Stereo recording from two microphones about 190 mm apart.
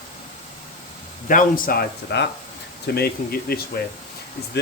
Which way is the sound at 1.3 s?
45° left (ahead or behind).